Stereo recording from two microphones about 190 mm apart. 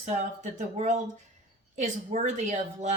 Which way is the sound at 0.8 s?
40° right (ahead or behind).